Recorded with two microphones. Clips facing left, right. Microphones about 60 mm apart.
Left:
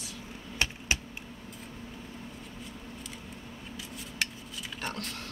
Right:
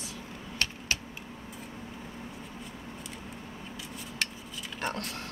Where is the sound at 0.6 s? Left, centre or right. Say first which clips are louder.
Left 2 dB; centre.